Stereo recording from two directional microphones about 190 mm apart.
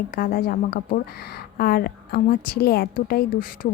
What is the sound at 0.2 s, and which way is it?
A woman's voice, 50° left (ahead or behind).